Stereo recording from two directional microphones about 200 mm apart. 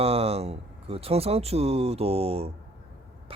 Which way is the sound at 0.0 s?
30° right (ahead or behind).